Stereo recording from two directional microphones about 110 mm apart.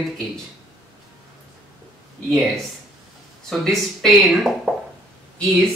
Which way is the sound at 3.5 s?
Centre (ahead or behind).